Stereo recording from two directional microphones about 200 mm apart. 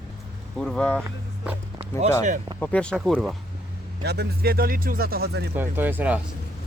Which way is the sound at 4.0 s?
55° right (ahead or behind).